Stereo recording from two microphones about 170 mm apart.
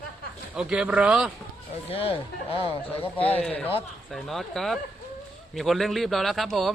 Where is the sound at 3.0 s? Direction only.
10° left (ahead or behind).